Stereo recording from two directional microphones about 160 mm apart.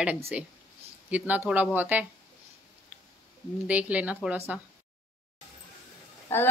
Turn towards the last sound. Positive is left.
turn(degrees=15)  # may be behind; listen again after turning